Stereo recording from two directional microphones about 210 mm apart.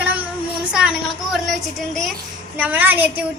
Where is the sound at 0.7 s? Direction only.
5° right (ahead or behind).